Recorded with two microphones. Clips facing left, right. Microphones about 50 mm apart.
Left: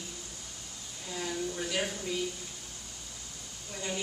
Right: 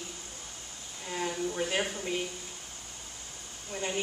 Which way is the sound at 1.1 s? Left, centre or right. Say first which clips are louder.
Right 2 dB; right.